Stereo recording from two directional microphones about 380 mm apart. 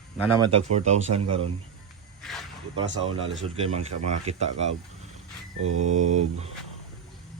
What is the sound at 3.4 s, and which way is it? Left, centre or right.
Speech, centre.